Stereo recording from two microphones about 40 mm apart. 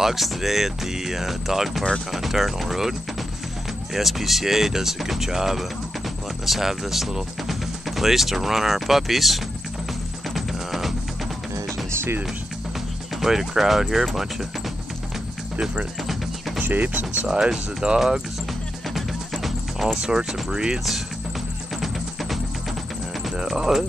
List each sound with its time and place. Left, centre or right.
0.0 s speech: centre
10.2 s music: centre
11.9 s music: right
13.1 s speech: centre
16.0 s music: centre
16.6 s speech: right
17.3 s speech: centre
18.9 s music: centre
20.1 s speech: centre
21.7 s music: centre
23.4 s a sound: centre